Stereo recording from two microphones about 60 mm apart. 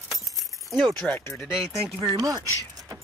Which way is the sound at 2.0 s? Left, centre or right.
Right.